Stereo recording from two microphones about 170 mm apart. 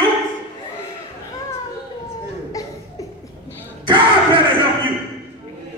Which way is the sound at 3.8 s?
30° right (ahead or behind).